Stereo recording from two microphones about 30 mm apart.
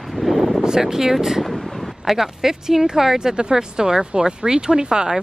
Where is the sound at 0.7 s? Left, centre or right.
Centre.